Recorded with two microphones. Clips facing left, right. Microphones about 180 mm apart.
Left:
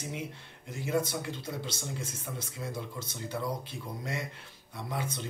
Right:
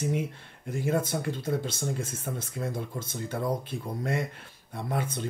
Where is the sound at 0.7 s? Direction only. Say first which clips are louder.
Right 3 dB; 50° right (ahead or behind).